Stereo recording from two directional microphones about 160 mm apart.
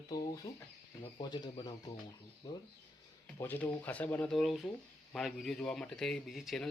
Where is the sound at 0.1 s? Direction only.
20° left (ahead or behind).